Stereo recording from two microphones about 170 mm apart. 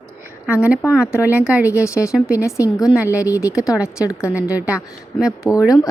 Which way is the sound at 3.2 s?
20° left (ahead or behind).